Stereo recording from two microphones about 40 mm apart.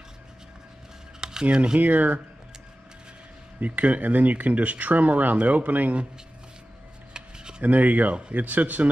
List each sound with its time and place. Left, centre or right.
1.2 s speech: right
1.8 s speech: right
3.6 s speech: right
7.2 s a sound: right
7.6 s speech: right
8.1 s speech: right
8.4 s speech: right